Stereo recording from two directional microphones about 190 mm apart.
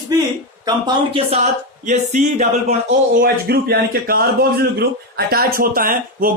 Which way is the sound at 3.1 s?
55° right (ahead or behind).